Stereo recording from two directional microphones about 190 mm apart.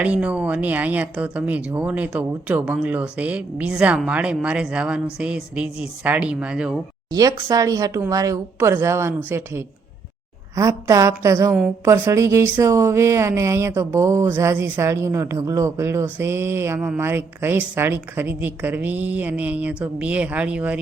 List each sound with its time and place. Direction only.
0.0 s a woman's voice: 5° right (ahead or behind)
7.1 s speech: 20° right (ahead or behind)